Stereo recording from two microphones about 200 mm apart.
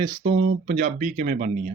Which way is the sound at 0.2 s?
35° right (ahead or behind).